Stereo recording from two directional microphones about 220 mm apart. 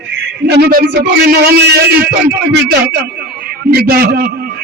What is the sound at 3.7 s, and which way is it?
Speech, 45° right (ahead or behind).